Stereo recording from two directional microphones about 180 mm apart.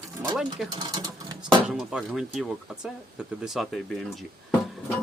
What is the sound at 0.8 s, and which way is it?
Speech, 20° right (ahead or behind).